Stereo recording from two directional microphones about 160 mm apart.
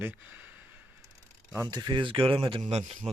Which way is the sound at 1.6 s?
25° right (ahead or behind).